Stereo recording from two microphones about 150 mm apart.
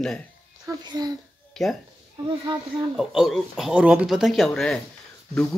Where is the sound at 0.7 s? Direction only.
25° right (ahead or behind).